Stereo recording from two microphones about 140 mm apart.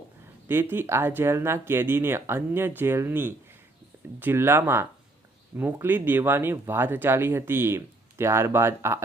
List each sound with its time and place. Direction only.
0.4 s speech: 15° right (ahead or behind)